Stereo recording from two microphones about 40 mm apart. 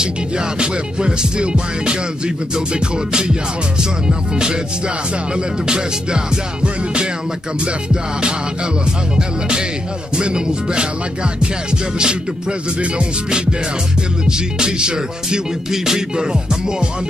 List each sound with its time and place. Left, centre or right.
0.6 s music: right
12.0 s music: right